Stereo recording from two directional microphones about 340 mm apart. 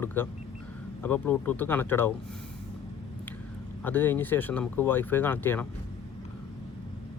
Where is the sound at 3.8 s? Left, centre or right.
Centre.